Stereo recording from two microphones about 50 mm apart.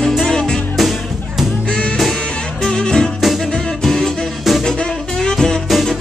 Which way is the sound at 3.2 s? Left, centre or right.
Centre.